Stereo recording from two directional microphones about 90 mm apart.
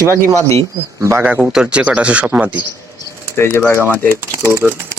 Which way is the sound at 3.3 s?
25° left (ahead or behind).